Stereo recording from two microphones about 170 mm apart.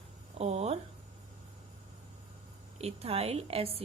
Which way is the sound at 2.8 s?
35° right (ahead or behind).